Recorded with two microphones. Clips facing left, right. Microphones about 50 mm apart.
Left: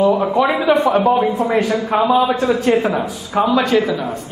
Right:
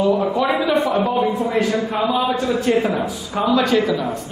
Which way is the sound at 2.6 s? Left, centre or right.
Left.